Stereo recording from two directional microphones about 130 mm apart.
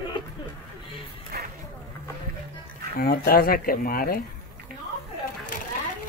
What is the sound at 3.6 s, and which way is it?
Speech, 90° left.